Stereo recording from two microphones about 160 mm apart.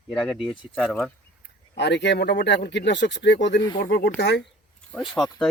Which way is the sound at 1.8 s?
90° left.